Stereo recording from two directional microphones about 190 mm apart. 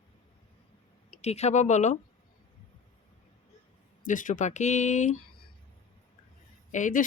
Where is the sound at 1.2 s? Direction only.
35° left (ahead or behind).